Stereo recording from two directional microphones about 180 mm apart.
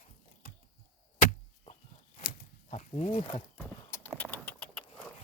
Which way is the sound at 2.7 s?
40° left (ahead or behind).